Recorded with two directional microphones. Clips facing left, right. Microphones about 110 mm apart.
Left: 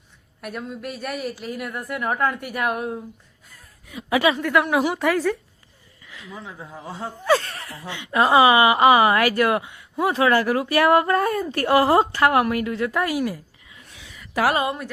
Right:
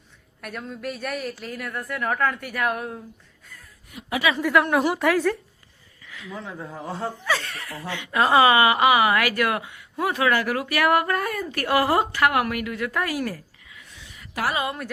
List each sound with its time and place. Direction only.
0.4 s a woman's voice: 5° left (ahead or behind)
4.4 s a woman's voice: centre (ahead or behind)
6.1 s a sound: 30° left (ahead or behind)
6.3 s a woman's voice: 5° left (ahead or behind)
7.3 s speech: 35° left (ahead or behind)
7.8 s a woman's voice: 20° left (ahead or behind)
14.5 s a woman's voice: 30° left (ahead or behind)